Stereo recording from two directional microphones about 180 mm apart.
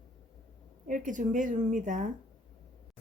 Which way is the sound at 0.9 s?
45° right (ahead or behind).